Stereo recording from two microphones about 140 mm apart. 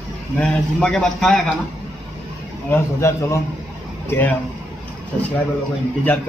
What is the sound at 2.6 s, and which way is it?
Speech, 20° left (ahead or behind).